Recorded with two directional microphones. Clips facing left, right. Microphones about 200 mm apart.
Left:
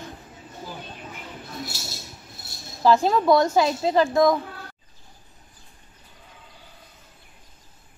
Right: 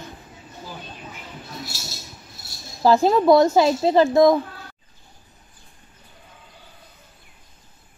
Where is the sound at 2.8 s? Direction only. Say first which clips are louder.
Right 3 dB; 30° right (ahead or behind).